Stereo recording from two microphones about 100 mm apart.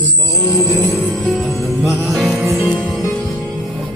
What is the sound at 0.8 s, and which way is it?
Music, centre (ahead or behind).